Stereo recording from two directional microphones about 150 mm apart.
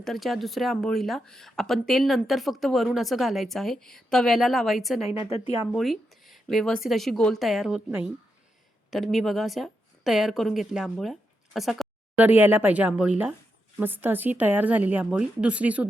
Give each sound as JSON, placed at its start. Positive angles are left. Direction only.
{"t": 0.0, "sound": "speech", "side_deg": 0}
{"t": 7.9, "sound": "speech", "side_deg": -15}
{"t": 8.9, "sound": "a woman's voice", "side_deg": 0}